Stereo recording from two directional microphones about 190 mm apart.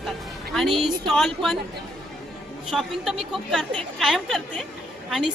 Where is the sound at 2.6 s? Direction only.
Centre (ahead or behind).